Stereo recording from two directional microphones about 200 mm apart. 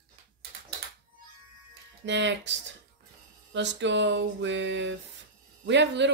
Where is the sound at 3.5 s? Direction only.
60° right (ahead or behind).